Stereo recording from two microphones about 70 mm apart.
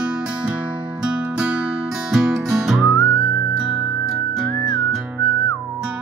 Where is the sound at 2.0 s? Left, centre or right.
Centre.